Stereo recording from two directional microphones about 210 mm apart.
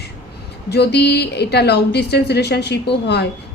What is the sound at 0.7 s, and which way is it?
A woman's voice, 50° left (ahead or behind).